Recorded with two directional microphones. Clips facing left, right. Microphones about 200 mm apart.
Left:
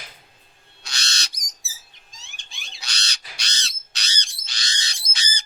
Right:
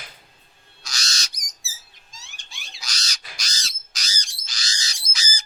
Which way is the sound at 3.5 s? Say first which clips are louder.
Left 1 dB; 65° left (ahead or behind).